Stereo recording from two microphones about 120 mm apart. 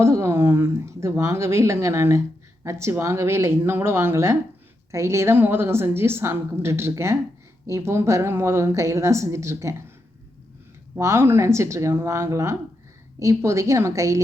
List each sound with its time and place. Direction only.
0.0 s a woman's voice: 25° right (ahead or behind)
10.9 s a woman's voice: 20° right (ahead or behind)